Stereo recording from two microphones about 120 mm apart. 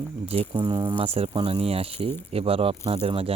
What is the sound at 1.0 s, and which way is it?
Speech, 50° right (ahead or behind).